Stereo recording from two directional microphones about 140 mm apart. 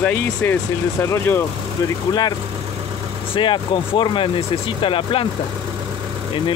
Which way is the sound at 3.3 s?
35° left (ahead or behind).